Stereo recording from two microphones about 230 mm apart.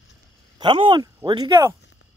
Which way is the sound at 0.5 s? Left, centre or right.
Right.